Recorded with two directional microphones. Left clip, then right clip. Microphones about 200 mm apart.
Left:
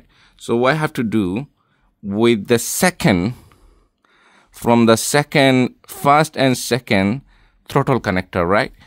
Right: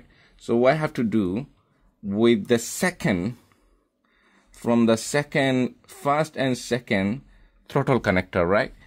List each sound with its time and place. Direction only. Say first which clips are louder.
0.2 s speech: left 3 dB; 35° left (ahead or behind)
7.8 s speech: even; 20° left (ahead or behind)